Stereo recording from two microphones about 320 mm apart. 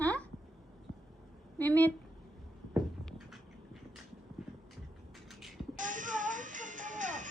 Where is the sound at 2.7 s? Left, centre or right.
Centre.